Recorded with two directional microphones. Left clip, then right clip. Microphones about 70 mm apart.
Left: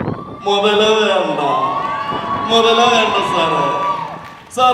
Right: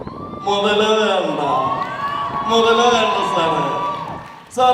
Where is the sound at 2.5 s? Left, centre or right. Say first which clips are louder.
Left 2 dB; left.